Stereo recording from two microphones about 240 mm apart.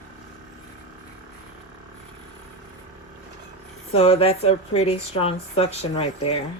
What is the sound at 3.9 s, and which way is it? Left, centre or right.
Speech, left.